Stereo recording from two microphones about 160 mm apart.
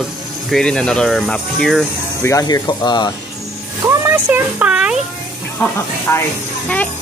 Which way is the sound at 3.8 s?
15° right (ahead or behind).